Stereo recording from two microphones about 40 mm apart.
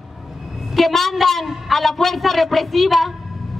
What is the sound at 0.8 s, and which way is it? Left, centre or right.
A man's voice, centre.